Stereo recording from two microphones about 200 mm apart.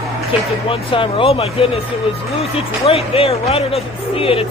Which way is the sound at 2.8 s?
30° left (ahead or behind).